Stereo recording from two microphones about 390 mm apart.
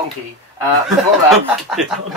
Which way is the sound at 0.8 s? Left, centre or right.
Centre.